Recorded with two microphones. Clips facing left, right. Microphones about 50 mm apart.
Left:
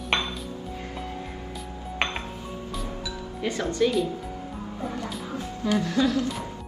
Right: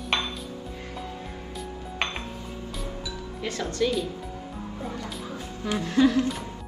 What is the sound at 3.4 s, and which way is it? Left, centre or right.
Speech, left.